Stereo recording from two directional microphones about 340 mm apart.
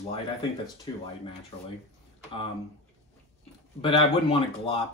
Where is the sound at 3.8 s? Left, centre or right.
Centre.